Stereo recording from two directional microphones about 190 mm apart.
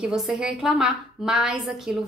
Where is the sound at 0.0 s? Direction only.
5° right (ahead or behind).